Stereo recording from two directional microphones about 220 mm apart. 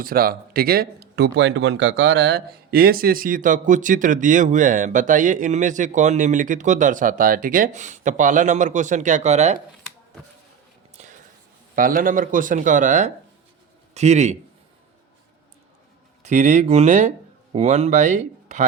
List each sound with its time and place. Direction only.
0.0 s speech: 40° right (ahead or behind)
10.9 s a sound: 35° right (ahead or behind)
11.7 s speech: 40° right (ahead or behind)
16.2 s speech: 30° right (ahead or behind)